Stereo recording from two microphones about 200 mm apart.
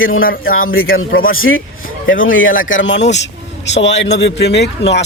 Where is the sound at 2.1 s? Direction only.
75° left (ahead or behind); by 5.0 s 60° left (ahead or behind).